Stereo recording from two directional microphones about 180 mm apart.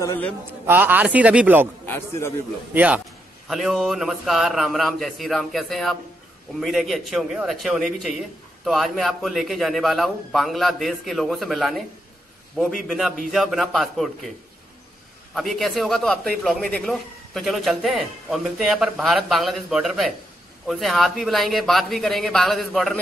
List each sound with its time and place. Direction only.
0.0 s a man's voice: 15° left (ahead or behind)
0.7 s a man's voice: 10° right (ahead or behind)
1.9 s a man's voice: 15° left (ahead or behind)
2.7 s a man's voice: 10° right (ahead or behind)
15.3 s a man's voice: centre (ahead or behind)